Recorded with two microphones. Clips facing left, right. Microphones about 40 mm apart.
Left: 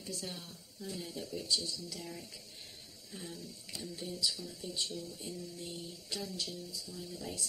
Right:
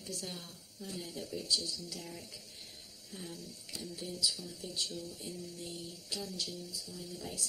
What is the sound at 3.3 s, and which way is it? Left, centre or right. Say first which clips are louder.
Speech: even; right.